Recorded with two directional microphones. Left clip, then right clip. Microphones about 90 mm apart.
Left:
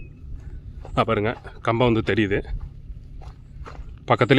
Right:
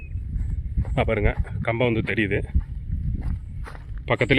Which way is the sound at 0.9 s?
20° left (ahead or behind).